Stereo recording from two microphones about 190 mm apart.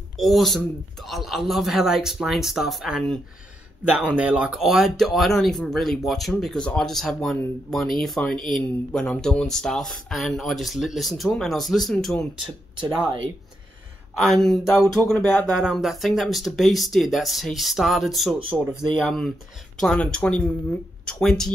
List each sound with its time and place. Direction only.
0.2 s speech: centre (ahead or behind)
12.7 s speech: 25° right (ahead or behind)
14.1 s speech: centre (ahead or behind)